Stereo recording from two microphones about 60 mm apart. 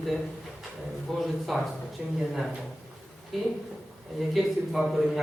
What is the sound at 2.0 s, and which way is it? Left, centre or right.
Speech, centre.